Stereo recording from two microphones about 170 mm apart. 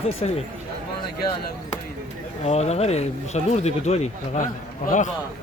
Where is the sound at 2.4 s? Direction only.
40° left (ahead or behind).